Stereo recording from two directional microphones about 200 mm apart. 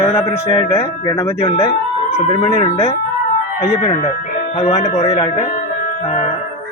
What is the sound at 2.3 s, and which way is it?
Speech, 30° left (ahead or behind).